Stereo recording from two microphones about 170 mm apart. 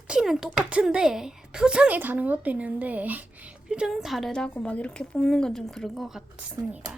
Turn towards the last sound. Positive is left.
turn(degrees=-5)  # may be behind; listen again after turning